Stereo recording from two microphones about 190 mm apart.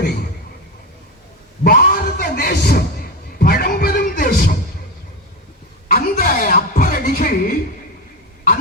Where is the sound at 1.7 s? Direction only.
50° left (ahead or behind).